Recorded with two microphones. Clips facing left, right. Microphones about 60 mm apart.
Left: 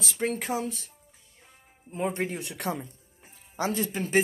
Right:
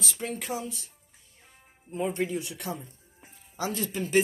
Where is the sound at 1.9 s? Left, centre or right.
Left.